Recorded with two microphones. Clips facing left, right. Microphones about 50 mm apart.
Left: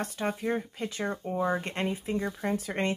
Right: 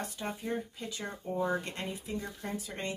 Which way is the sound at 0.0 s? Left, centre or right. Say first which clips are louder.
Left 7 dB; left.